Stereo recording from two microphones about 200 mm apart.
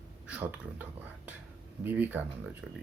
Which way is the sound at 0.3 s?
5° right (ahead or behind).